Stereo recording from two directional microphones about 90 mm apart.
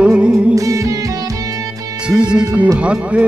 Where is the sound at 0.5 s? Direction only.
40° right (ahead or behind).